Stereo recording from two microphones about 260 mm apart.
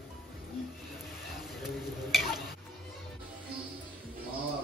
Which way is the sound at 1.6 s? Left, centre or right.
Centre.